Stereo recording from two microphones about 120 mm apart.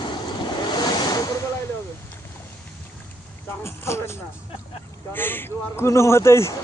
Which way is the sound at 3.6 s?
20° left (ahead or behind).